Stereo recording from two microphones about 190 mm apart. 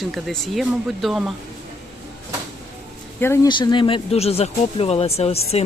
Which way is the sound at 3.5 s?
25° left (ahead or behind).